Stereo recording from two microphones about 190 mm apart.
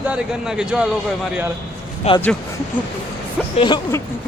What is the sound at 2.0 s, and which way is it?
Speech, 35° left (ahead or behind).